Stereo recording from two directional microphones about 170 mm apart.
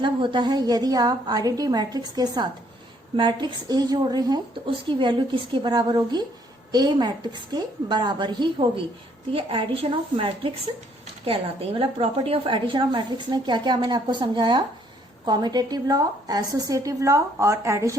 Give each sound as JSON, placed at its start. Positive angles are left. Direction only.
{"t": 0.0, "sound": "a woman's voice", "side_deg": -30}